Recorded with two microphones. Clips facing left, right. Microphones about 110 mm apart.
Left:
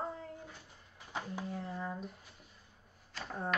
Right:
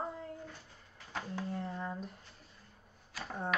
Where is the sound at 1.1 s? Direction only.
10° left (ahead or behind).